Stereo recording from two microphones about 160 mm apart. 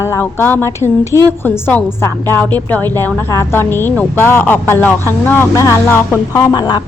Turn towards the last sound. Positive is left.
turn(degrees=25)  # may be behind; listen again after turning